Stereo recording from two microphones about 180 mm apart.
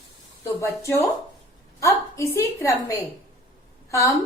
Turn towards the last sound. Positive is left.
turn(degrees=15)  # may be behind; listen again after turning